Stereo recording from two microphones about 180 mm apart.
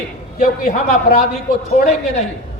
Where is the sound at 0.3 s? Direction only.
50° left (ahead or behind).